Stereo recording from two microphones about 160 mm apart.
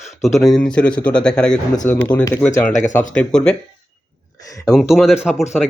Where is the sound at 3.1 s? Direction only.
5° left (ahead or behind).